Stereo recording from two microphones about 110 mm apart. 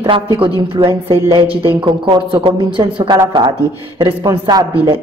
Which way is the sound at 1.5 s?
20° right (ahead or behind).